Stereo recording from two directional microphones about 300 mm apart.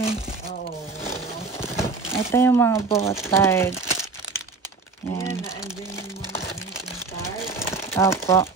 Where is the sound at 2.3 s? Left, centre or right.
Centre.